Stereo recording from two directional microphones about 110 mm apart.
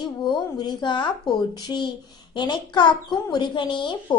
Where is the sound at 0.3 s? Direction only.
45° left (ahead or behind).